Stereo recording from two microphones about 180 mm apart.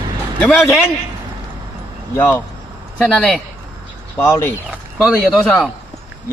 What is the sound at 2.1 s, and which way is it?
Speech, 10° left (ahead or behind).